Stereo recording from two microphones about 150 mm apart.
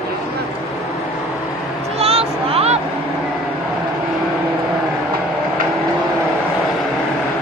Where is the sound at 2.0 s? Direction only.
40° right (ahead or behind).